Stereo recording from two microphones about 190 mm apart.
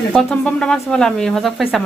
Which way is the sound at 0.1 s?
5° left (ahead or behind).